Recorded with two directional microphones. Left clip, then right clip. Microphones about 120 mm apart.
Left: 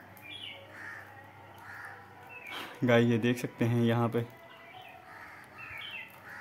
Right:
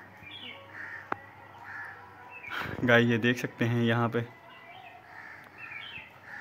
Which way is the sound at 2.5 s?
25° left (ahead or behind).